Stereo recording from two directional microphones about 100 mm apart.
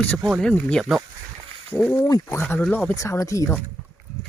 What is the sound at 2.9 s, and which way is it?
Speech, 30° left (ahead or behind).